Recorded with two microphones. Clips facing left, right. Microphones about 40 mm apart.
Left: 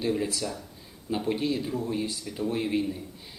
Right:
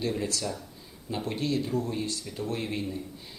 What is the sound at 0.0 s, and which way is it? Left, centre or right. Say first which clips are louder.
Speech: left 2 dB; centre.